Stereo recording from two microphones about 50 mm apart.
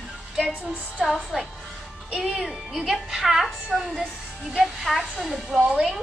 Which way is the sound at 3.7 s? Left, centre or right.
Centre.